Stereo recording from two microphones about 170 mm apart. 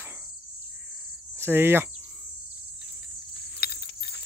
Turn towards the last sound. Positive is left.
turn(degrees=70)  # may be behind; listen again after turning